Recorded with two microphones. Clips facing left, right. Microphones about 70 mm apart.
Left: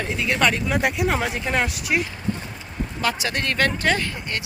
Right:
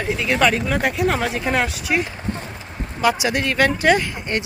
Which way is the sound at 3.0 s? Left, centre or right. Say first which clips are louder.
Right 6 dB; centre.